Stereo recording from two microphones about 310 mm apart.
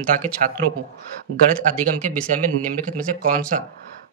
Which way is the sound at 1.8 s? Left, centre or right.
Right.